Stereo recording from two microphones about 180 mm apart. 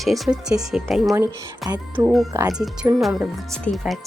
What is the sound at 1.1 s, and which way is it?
Speech, 20° right (ahead or behind).